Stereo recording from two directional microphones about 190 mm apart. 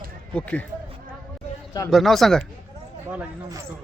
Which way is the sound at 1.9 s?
Centre (ahead or behind).